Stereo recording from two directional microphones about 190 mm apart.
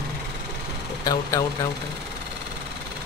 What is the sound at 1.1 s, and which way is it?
Speech, 20° left (ahead or behind).